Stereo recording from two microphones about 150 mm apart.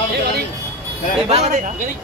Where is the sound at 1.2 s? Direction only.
45° right (ahead or behind).